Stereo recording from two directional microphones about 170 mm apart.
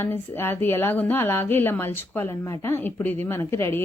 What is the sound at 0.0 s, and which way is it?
Speech, 10° left (ahead or behind).